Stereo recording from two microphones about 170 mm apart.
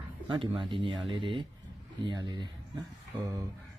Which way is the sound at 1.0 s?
30° right (ahead or behind).